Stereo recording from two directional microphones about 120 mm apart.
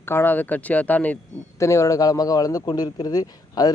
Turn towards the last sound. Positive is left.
turn(degrees=35)  # may be behind; listen again after turning